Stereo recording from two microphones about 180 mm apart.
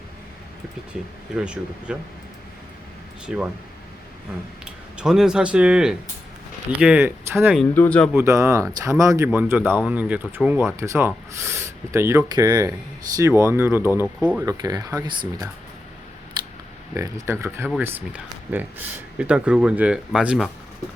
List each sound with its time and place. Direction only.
0.9 s speech: 5° right (ahead or behind)
3.2 s speech: 5° right (ahead or behind)
4.6 s speech: 5° right (ahead or behind)
7.7 s speech: 10° left (ahead or behind)
8.1 s speech: 15° right (ahead or behind)
14.4 s speech: 20° right (ahead or behind)
16.9 s speech: 15° right (ahead or behind)